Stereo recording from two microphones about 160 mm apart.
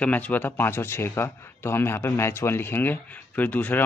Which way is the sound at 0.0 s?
10° left (ahead or behind).